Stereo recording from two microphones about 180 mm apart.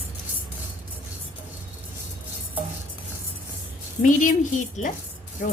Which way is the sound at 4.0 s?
45° left (ahead or behind).